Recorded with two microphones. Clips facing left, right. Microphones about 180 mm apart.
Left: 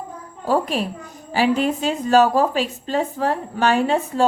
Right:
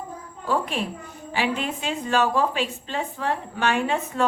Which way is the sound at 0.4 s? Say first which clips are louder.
Left 5 dB; 40° left (ahead or behind).